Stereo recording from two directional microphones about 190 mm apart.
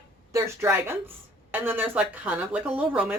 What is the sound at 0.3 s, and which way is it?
Speech, 15° right (ahead or behind).